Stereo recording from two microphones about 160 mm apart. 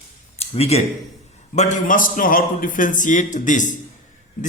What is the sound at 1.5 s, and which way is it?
Speech, 50° left (ahead or behind).